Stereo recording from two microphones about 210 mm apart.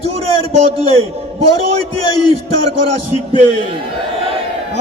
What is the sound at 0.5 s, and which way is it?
A man's voice, 30° right (ahead or behind).